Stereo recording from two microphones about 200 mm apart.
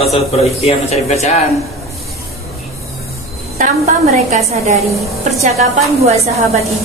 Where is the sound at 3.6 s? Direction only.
35° right (ahead or behind).